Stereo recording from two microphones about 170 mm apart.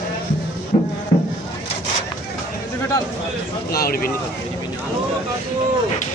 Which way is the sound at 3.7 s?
65° left (ahead or behind).